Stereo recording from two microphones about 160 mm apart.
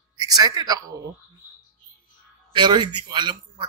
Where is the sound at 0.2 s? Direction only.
25° right (ahead or behind).